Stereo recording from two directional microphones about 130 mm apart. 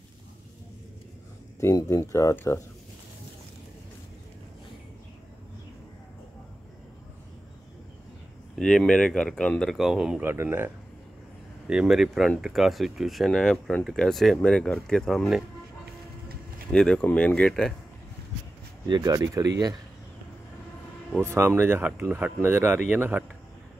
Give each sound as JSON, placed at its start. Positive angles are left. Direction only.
{"t": 1.6, "sound": "speech", "side_deg": 25}
{"t": 8.5, "sound": "speech", "side_deg": 5}
{"t": 10.2, "sound": "speech", "side_deg": -15}
{"t": 11.6, "sound": "speech", "side_deg": -5}
{"t": 16.7, "sound": "speech", "side_deg": 5}
{"t": 18.9, "sound": "speech", "side_deg": -35}
{"t": 21.2, "sound": "speech", "side_deg": -20}